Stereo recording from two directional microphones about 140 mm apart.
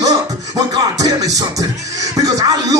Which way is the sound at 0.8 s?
25° right (ahead or behind).